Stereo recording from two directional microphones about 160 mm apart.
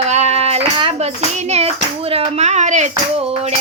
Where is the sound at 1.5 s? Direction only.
40° right (ahead or behind).